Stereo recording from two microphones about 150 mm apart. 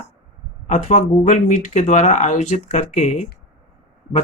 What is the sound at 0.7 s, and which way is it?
Speech, 50° left (ahead or behind).